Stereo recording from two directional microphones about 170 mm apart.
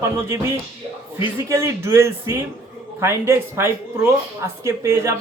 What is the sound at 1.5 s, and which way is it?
Speech, 15° right (ahead or behind).